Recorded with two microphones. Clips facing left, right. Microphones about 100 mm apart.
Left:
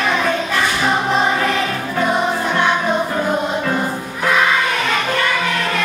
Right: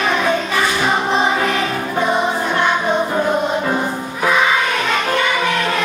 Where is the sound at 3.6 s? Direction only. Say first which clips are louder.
Right 1 dB; 10° right (ahead or behind).